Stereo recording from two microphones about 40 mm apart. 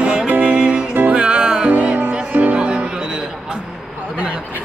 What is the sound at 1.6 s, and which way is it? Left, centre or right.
Music, right.